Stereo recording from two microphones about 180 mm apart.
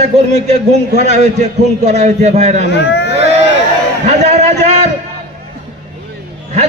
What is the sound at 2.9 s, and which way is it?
Speech, 65° left (ahead or behind).